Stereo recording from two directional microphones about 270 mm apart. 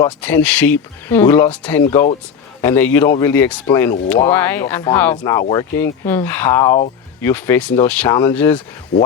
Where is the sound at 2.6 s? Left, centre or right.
Centre.